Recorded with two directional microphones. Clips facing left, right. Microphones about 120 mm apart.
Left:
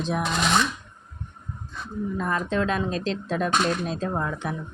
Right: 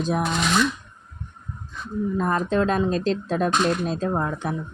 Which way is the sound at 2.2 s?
40° right (ahead or behind).